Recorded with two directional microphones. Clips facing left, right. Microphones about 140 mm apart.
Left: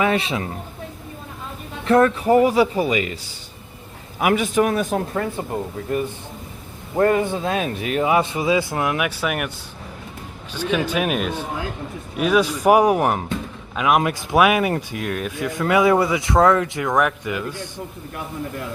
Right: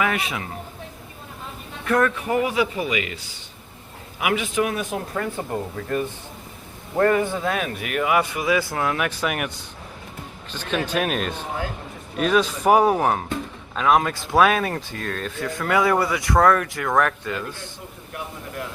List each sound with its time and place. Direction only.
0.0 s speech: 30° left (ahead or behind)
1.8 s a man's voice: 30° left (ahead or behind)
4.2 s a man's voice: 45° left (ahead or behind)
7.0 s speech: 25° left (ahead or behind); by 9.5 s centre (ahead or behind)
10.5 s speech: 10° left (ahead or behind)